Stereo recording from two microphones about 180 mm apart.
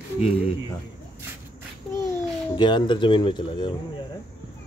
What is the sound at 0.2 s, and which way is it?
Speech, 35° left (ahead or behind).